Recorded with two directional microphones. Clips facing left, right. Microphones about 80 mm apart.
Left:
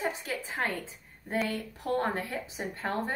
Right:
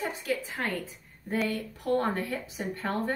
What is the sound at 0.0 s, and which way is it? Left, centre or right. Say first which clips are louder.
A woman's voice: right 2 dB; left.